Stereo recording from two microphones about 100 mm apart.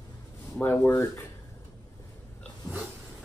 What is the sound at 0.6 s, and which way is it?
Speech, 25° left (ahead or behind).